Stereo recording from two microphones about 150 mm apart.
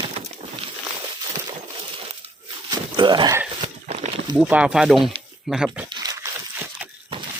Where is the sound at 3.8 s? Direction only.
45° right (ahead or behind).